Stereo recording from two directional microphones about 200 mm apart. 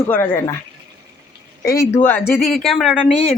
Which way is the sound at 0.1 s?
15° left (ahead or behind).